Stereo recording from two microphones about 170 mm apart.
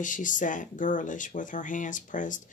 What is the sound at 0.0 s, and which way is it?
Speech, 50° left (ahead or behind).